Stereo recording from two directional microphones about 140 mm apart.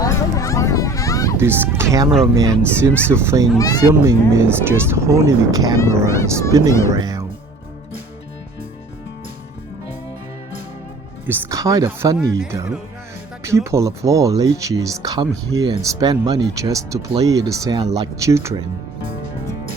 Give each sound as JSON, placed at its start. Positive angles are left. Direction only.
{"t": 0.0, "sound": "a sound", "side_deg": 25}
{"t": 1.4, "sound": "speech", "side_deg": -15}
{"t": 5.8, "sound": "speech", "side_deg": 20}
{"t": 6.9, "sound": "speech", "side_deg": -25}
{"t": 11.3, "sound": "speech", "side_deg": -25}
{"t": 13.7, "sound": "speech", "side_deg": -20}